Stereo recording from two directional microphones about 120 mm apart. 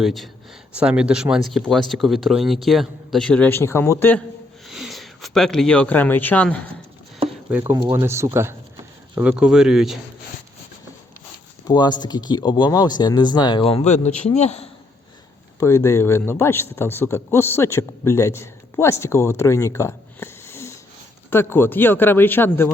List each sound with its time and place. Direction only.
0.0 s speech: centre (ahead or behind); by 4.2 s 20° left (ahead or behind)
4.7 s speech: centre (ahead or behind)
7.5 s speech: 10° right (ahead or behind)
7.9 s speech: 20° right (ahead or behind)
9.1 s speech: 10° right (ahead or behind)
11.6 s speech: 35° left (ahead or behind)
13.7 s a man's voice: 60° left (ahead or behind)
15.6 s speech: 25° left (ahead or behind)